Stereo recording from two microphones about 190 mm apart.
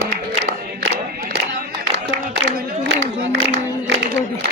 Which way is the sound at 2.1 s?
65° right (ahead or behind).